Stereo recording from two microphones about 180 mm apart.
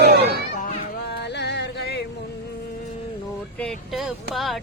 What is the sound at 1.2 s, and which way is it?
Music, 70° left (ahead or behind).